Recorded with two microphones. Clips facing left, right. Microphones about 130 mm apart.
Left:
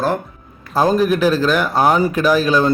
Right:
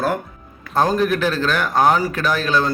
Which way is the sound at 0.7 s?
10° left (ahead or behind).